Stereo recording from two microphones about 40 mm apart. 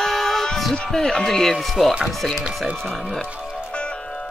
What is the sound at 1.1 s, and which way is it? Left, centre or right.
Speech, centre.